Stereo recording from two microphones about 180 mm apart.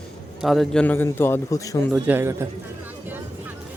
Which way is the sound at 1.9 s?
10° right (ahead or behind).